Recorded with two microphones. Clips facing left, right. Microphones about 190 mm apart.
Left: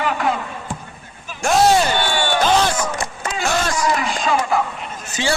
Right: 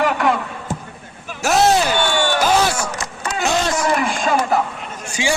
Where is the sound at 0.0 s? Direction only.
70° right (ahead or behind).